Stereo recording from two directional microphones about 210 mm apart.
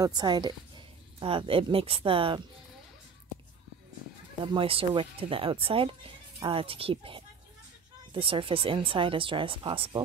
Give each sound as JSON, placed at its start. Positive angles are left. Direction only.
{"t": 0.0, "sound": "speech", "side_deg": -20}
{"t": 4.5, "sound": "speech", "side_deg": -25}